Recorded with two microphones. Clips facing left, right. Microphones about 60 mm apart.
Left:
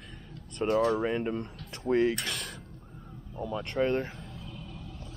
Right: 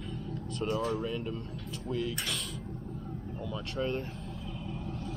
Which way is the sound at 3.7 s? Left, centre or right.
Left.